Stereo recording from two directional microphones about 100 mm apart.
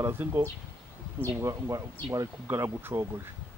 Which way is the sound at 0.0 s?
25° right (ahead or behind).